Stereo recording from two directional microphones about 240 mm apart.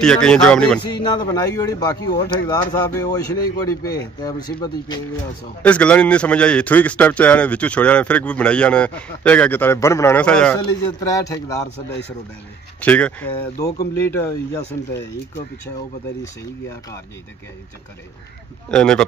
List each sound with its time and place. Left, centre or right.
0.0 s a man's voice: centre
0.8 s speech: centre
5.6 s a man's voice: centre
12.8 s speech: centre
18.7 s a man's voice: centre